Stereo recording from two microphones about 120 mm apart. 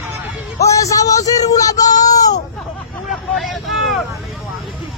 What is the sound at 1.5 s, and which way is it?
Child singing, 30° left (ahead or behind).